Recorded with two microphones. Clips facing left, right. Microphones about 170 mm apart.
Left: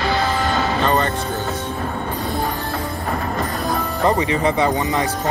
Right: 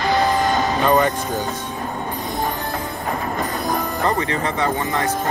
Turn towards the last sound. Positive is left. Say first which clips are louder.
# left 3 dB
turn(degrees=15)  # may be behind; listen again after turning